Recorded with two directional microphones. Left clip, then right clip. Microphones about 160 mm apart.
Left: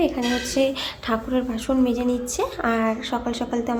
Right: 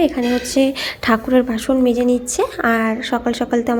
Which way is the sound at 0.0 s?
25° right (ahead or behind).